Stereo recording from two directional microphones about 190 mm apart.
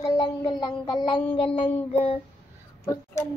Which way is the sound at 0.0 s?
20° left (ahead or behind).